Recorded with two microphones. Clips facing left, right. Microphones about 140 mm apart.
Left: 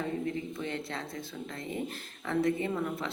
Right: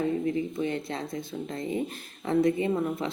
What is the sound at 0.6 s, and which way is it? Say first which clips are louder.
A woman's voice: right 6 dB; 15° right (ahead or behind).